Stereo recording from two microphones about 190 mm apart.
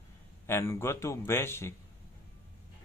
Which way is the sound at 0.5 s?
15° left (ahead or behind).